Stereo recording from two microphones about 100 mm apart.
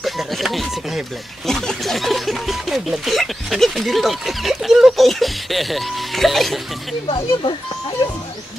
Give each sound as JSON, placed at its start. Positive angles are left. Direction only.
{"t": 0.0, "sound": "speech", "side_deg": 0}
{"t": 7.1, "sound": "speech", "side_deg": 65}